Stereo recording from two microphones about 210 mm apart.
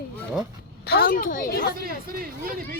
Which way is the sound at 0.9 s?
45° left (ahead or behind).